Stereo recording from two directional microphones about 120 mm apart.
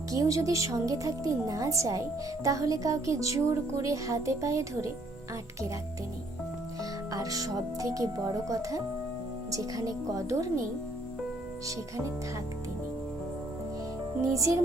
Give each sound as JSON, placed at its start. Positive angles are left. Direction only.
{"t": 0.1, "sound": "a woman's voice", "side_deg": -30}
{"t": 7.1, "sound": "a woman's voice", "side_deg": -30}
{"t": 14.2, "sound": "a woman's voice", "side_deg": -25}